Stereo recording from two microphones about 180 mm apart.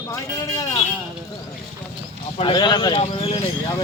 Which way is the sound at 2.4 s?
25° left (ahead or behind).